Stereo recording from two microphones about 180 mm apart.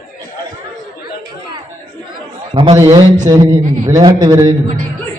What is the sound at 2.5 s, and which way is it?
Speech, 30° right (ahead or behind).